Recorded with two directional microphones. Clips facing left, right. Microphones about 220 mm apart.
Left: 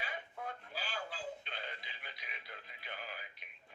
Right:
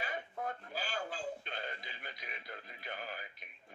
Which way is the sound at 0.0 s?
45° right (ahead or behind).